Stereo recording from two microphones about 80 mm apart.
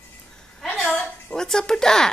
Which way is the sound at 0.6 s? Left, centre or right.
Centre.